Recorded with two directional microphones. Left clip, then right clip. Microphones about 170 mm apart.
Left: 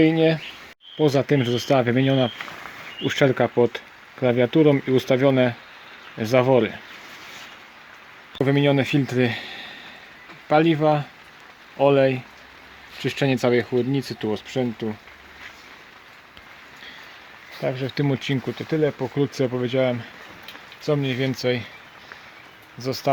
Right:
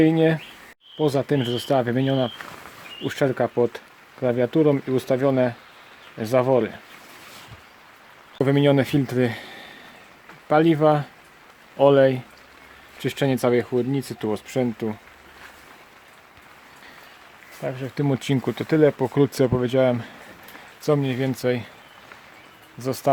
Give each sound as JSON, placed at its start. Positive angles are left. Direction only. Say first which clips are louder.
{"t": 0.0, "sound": "speech", "louder": "even", "side_deg": -15}
{"t": 0.9, "sound": "speech", "louder": "left 2 dB", "side_deg": 0}
{"t": 8.4, "sound": "speech", "louder": "right 1 dB", "side_deg": -5}
{"t": 17.6, "sound": "speech", "louder": "left 4 dB", "side_deg": 15}
{"t": 17.9, "sound": "speech", "louder": "even", "side_deg": -5}
{"t": 18.2, "sound": "speech", "louder": "right 2 dB", "side_deg": -15}
{"t": 18.5, "sound": "speech", "louder": "right 6 dB", "side_deg": -30}
{"t": 19.1, "sound": "speech", "louder": "right 3 dB", "side_deg": -25}
{"t": 22.8, "sound": "speech", "louder": "even", "side_deg": -10}